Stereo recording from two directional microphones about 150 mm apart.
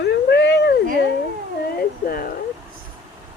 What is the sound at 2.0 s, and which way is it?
Speech, 75° left (ahead or behind).